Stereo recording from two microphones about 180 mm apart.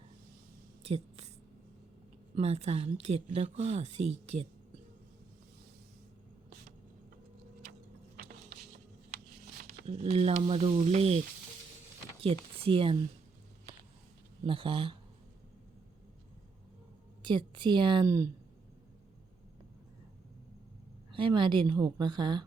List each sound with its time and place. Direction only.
0.8 s a sound: 35° right (ahead or behind)
2.3 s speech: 35° right (ahead or behind)
8.1 s a sound: 60° right (ahead or behind)
9.6 s a sound: 55° right (ahead or behind)
9.8 s speech: 35° right (ahead or behind)
12.2 s speech: 30° right (ahead or behind)
14.4 s a woman's voice: 30° right (ahead or behind)
17.2 s a woman's voice: 25° right (ahead or behind)
21.1 s a woman's voice: 25° right (ahead or behind)